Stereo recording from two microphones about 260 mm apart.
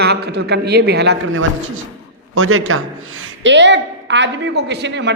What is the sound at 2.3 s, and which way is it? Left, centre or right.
A woman's voice, right.